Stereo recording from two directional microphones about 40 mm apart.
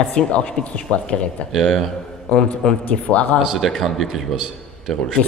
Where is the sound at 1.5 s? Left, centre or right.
Centre.